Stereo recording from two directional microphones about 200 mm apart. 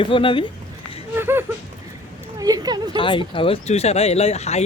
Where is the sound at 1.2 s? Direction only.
10° right (ahead or behind).